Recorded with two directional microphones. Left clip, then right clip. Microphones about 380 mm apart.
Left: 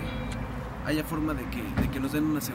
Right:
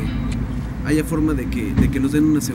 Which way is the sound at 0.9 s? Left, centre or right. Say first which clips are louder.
Right 10 dB; centre.